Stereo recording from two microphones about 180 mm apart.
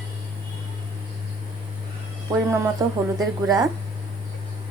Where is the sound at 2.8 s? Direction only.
20° right (ahead or behind).